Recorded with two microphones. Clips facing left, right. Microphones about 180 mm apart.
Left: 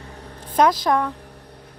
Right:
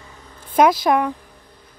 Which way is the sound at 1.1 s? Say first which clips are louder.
Left 5 dB; 70° left (ahead or behind).